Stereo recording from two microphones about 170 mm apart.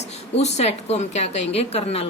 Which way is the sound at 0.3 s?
40° left (ahead or behind).